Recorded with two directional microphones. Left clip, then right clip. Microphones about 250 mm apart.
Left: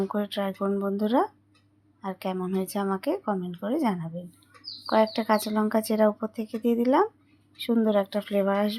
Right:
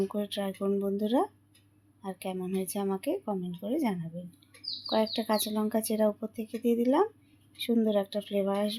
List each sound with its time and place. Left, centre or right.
0.1 s speech: centre